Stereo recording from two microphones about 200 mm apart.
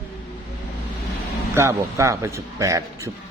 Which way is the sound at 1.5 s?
15° right (ahead or behind).